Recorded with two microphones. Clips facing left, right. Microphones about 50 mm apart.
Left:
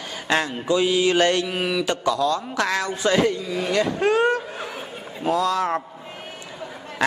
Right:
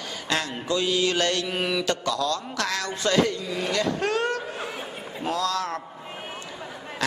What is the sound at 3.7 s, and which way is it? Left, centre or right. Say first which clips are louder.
A man's voice: left 5 dB; centre.